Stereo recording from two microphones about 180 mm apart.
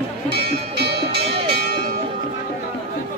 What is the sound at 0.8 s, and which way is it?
Music, 65° right (ahead or behind).